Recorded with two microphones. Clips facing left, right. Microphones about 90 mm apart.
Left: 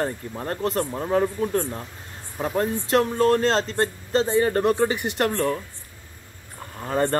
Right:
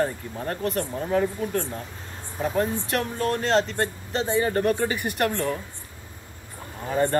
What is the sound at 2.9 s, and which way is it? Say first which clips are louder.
Speech: left 7 dB; 30° left (ahead or behind).